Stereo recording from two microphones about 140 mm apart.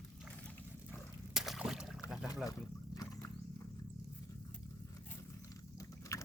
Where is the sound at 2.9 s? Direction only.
25° left (ahead or behind).